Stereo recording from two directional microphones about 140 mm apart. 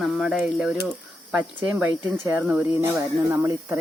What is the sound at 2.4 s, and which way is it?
Speech, 15° right (ahead or behind).